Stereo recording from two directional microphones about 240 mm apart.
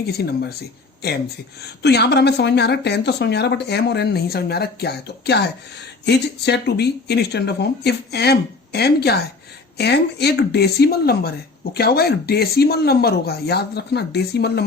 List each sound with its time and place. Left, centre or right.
0.0 s speech: left
1.5 s a woman's voice: left